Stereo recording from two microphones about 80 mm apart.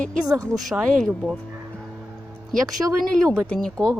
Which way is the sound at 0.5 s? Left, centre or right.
Centre.